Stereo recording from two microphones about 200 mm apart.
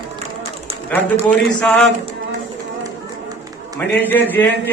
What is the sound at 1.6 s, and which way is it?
Speech, centre (ahead or behind).